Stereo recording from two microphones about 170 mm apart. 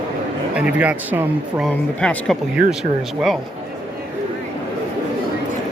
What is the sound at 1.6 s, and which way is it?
Speech, 5° left (ahead or behind).